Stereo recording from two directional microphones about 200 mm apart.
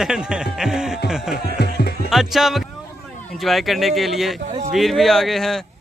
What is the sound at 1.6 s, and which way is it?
Music, 50° left (ahead or behind).